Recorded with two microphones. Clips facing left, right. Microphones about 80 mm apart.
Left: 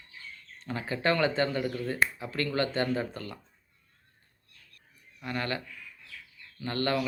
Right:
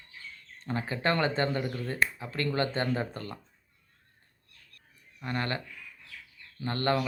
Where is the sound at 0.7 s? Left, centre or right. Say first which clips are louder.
Left 1 dB; right.